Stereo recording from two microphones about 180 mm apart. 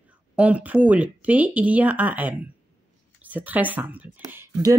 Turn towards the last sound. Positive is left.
turn(degrees=-20)  # may be behind; listen again after turning